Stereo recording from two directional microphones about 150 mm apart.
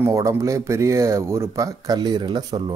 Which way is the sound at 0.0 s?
20° right (ahead or behind).